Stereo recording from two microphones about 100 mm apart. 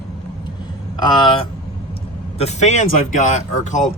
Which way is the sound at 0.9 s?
45° left (ahead or behind).